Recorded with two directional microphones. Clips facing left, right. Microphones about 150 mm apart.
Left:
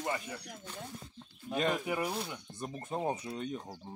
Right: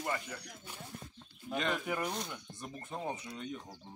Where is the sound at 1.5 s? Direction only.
35° left (ahead or behind).